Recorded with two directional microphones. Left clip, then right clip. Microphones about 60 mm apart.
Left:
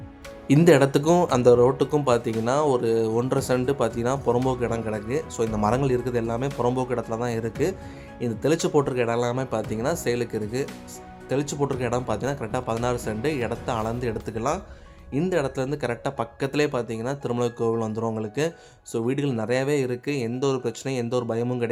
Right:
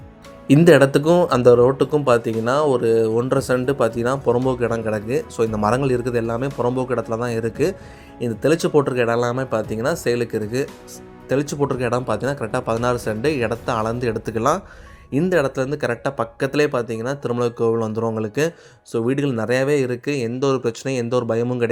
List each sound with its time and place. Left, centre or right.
0.6 s speech: right
0.9 s a man's voice: centre
6.6 s a man's voice: centre
6.8 s speech: right
11.3 s speech: right
15.5 s speech: right
18.2 s speech: right
18.9 s speech: right